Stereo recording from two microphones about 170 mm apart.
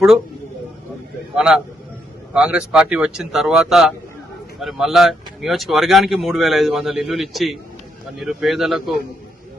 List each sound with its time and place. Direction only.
1.4 s speech: 5° right (ahead or behind)